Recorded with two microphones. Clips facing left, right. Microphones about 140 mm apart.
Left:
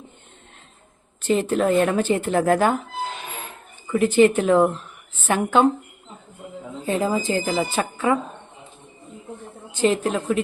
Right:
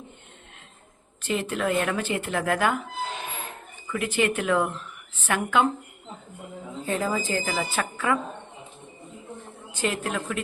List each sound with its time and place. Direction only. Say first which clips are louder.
1.3 s speech: left 7 dB; 30° left (ahead or behind)
3.9 s speech: left 9 dB; 35° left (ahead or behind)
6.8 s a woman's voice: left 5 dB; 20° left (ahead or behind)
9.8 s a woman's voice: left 8 dB; 25° left (ahead or behind)